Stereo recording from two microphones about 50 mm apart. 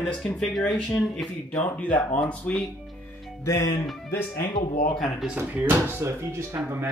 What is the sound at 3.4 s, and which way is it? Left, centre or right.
Speech, left.